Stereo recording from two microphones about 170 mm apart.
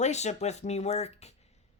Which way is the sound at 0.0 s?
40° left (ahead or behind).